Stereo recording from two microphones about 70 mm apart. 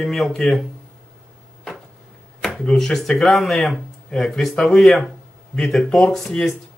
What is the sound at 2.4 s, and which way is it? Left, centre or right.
Speech, centre.